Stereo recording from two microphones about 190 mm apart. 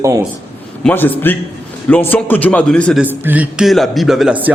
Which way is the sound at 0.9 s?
10° left (ahead or behind).